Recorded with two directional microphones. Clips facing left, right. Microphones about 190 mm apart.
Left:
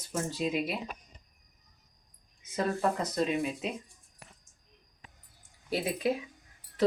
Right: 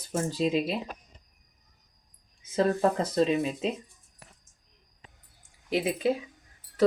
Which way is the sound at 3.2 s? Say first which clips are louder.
Right 5 dB; 30° right (ahead or behind).